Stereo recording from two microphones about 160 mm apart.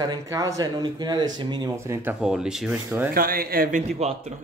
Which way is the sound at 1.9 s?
15° right (ahead or behind).